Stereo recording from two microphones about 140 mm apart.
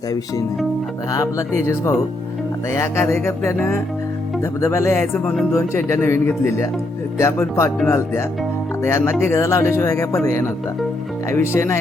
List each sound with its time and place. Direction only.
1.1 s speech: 20° left (ahead or behind)
2.6 s music: 20° left (ahead or behind)
5.5 s speech: 20° left (ahead or behind)
8.8 s music: 15° left (ahead or behind)
9.2 s speech: 20° left (ahead or behind)
11.3 s speech: 20° left (ahead or behind)